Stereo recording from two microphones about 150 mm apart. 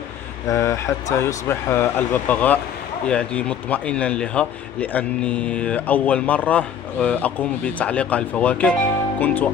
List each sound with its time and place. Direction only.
0.5 s a man's voice: 20° left (ahead or behind)